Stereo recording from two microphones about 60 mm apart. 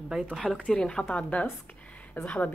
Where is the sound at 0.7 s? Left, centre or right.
Centre; by 2.5 s left.